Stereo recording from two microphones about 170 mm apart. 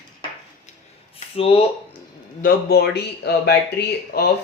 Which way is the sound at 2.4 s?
70° left (ahead or behind).